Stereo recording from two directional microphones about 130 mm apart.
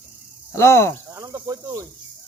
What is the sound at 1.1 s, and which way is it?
Speech, 25° right (ahead or behind).